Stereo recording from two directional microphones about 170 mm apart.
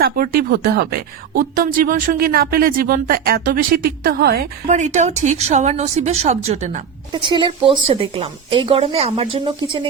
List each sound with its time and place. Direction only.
0.0 s speech: 60° right (ahead or behind)
4.7 s speech: 45° right (ahead or behind)
7.1 s speech: 30° right (ahead or behind)